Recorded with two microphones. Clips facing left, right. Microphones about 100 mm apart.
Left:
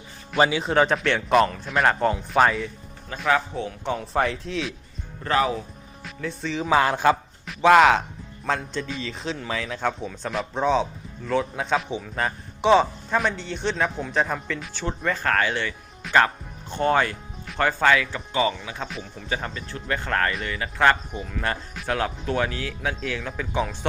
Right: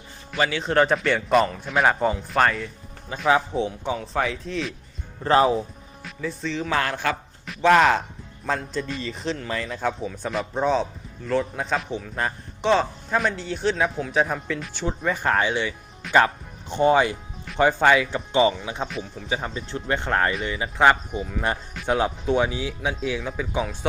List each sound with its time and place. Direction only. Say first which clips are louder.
0.5 s a man's voice: even; 5° left (ahead or behind)
3.2 s speech: right 3 dB; 20° right (ahead or behind)
3.8 s a man's voice: left 1 dB; 5° left (ahead or behind)
5.2 s speech: right 4 dB; 30° right (ahead or behind)
6.0 s speech: right 1 dB; centre (ahead or behind); by 7.2 s 20° left (ahead or behind)
7.4 s a man's voice: left 2 dB; centre (ahead or behind); by 18.9 s 20° right (ahead or behind)
18.9 s a man's voice: right 3 dB; centre (ahead or behind)
19.3 s speech: right 1 dB; 10° right (ahead or behind)
19.7 s speech: right 2 dB; 25° right (ahead or behind); by 23.7 s 5° right (ahead or behind)